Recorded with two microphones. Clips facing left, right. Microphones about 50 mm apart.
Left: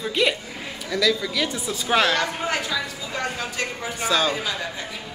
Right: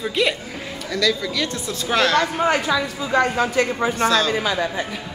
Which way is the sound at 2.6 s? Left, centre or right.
Right.